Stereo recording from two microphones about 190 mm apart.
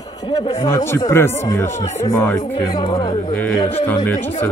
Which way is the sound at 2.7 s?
25° left (ahead or behind).